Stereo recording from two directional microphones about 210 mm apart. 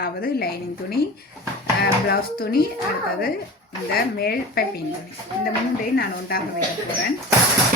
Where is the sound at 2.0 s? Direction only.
45° left (ahead or behind).